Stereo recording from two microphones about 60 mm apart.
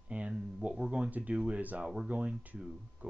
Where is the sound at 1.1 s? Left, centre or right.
Right.